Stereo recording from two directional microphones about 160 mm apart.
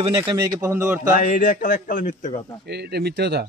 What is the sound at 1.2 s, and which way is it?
Speech, 60° left (ahead or behind).